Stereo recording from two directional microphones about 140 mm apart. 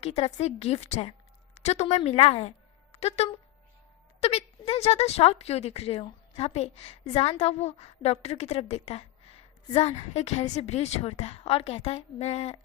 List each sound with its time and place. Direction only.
0.0 s a woman's voice: 50° left (ahead or behind)